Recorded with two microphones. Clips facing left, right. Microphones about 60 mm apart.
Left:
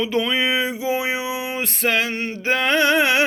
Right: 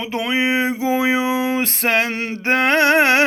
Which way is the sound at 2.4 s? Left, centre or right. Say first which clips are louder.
Right 3 dB; right.